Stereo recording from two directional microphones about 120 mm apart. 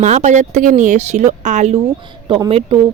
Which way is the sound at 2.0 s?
40° right (ahead or behind).